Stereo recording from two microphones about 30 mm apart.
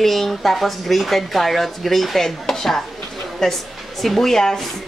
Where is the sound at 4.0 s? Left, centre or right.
Centre.